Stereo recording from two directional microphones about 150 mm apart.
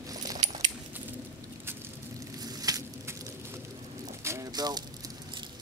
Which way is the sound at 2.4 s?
25° right (ahead or behind).